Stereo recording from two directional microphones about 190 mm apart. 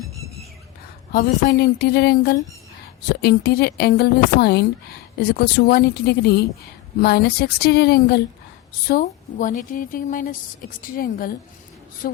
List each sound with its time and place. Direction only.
1.1 s a woman's voice: 55° left (ahead or behind)